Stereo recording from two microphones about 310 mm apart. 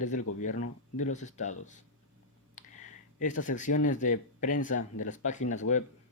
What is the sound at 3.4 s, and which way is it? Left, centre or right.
Speech, left.